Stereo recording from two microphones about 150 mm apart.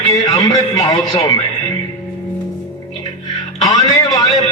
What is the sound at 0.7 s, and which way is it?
Speech, 20° left (ahead or behind).